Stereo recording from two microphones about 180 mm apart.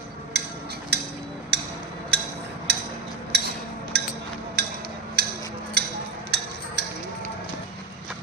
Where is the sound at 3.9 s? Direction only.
65° right (ahead or behind).